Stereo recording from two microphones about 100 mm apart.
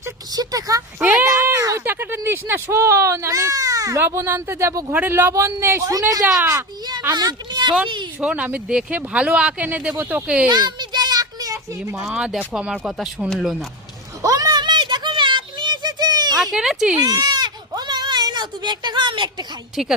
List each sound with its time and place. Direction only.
0.3 s a woman's voice: 35° right (ahead or behind)
0.9 s speech: 15° right (ahead or behind)
1.2 s a sound: 30° right (ahead or behind)
1.8 s speech: 20° right (ahead or behind)
5.9 s a woman's voice: 35° right (ahead or behind)
6.4 s speech: 20° right (ahead or behind)
7.1 s speech: 40° right (ahead or behind)
8.2 s speech: 15° right (ahead or behind)
10.5 s a sound: 45° right (ahead or behind)
11.9 s speech: 10° right (ahead or behind)
14.2 s a sound: 35° right (ahead or behind)
16.4 s speech: 5° right (ahead or behind)
17.0 s sheep: 40° right (ahead or behind)